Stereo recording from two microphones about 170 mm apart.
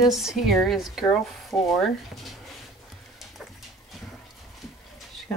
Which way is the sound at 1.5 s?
15° left (ahead or behind).